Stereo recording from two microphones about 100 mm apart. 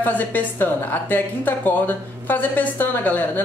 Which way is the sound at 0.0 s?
15° left (ahead or behind).